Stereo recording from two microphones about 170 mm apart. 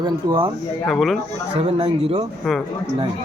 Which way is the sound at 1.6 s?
35° right (ahead or behind).